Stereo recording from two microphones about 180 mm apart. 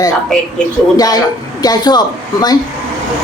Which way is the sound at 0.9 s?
20° left (ahead or behind).